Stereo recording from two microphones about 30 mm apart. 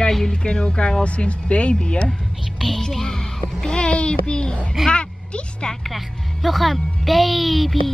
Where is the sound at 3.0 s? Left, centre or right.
Centre.